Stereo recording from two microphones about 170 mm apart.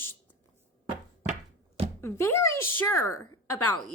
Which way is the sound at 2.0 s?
15° left (ahead or behind).